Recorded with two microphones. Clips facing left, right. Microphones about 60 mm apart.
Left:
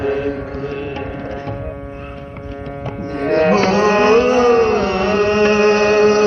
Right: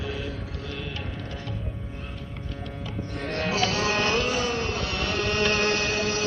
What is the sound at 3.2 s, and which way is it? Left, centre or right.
Carnatic music, left.